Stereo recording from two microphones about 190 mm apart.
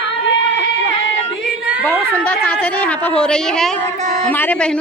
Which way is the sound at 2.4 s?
10° left (ahead or behind).